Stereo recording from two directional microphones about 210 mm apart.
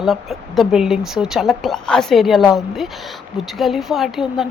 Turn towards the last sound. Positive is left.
turn(degrees=0)  # may be behind; listen again after turning